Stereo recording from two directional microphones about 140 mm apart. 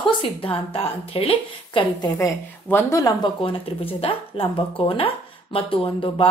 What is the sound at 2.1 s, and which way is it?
Speech, 20° left (ahead or behind).